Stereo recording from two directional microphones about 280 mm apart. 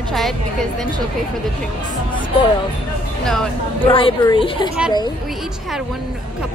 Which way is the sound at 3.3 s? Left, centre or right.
Centre.